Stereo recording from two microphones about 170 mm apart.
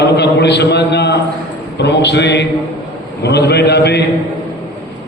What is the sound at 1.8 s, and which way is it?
Speech, 90° left.